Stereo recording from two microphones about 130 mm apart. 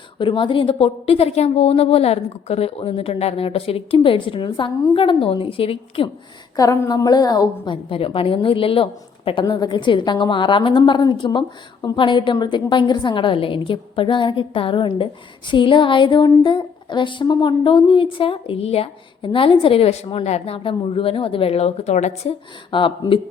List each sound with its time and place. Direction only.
0.2 s a woman's voice: 40° left (ahead or behind)
6.6 s a woman's voice: 30° left (ahead or behind); by 22.3 s 60° left (ahead or behind)
22.7 s a woman's voice: 40° left (ahead or behind)